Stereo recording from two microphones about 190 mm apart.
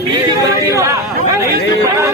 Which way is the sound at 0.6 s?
15° right (ahead or behind).